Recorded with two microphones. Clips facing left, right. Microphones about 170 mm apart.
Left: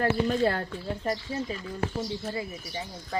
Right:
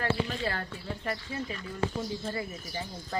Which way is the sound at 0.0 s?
45° left (ahead or behind).